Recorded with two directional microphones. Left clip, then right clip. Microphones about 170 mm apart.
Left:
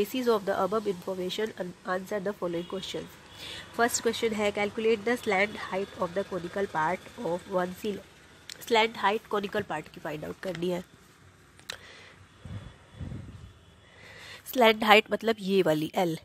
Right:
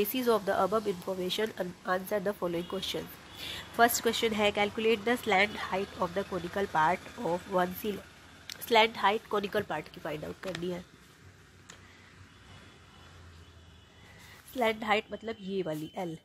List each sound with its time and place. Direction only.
0.0 s speech: 10° left (ahead or behind)
14.6 s a woman's voice: 50° left (ahead or behind)